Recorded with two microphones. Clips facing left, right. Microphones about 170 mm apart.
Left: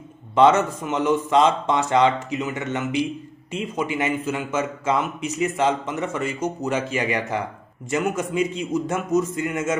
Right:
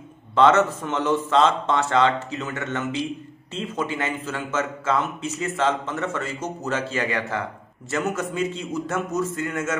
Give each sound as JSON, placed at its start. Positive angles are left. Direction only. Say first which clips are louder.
{"t": 0.4, "sound": "a man's voice", "louder": "left 1 dB", "side_deg": 15}